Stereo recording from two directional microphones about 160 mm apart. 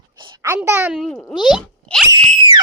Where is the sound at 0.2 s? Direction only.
30° right (ahead or behind).